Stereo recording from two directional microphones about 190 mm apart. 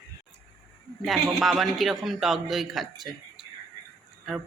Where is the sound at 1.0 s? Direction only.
Centre (ahead or behind).